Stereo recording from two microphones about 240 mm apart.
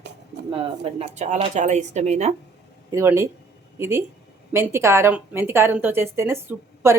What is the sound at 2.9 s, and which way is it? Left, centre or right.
A woman's voice, centre.